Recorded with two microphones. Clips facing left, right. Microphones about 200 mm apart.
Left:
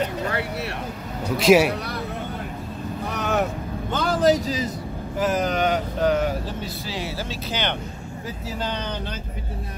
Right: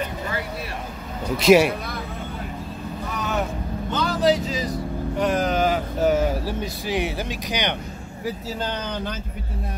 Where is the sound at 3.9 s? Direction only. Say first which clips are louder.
Left 1 dB; 50° left (ahead or behind).